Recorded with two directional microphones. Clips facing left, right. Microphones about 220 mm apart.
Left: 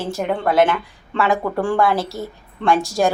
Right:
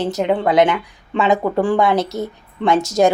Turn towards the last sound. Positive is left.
turn(degrees=-20)  # may be behind; listen again after turning